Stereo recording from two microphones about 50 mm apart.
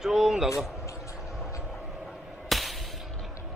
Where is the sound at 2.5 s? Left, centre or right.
Centre.